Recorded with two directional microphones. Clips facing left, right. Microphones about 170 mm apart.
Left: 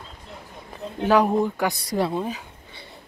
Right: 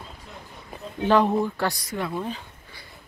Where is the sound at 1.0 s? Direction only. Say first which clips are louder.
Left 1 dB; 10° left (ahead or behind).